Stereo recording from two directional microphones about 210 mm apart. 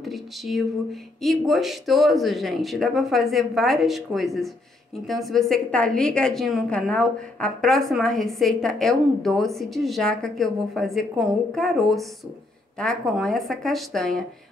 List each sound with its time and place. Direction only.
0.0 s a woman's voice: centre (ahead or behind)